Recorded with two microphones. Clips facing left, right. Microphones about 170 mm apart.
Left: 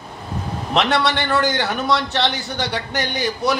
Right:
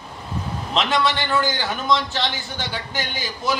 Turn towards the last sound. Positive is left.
turn(degrees=70)  # may be behind; listen again after turning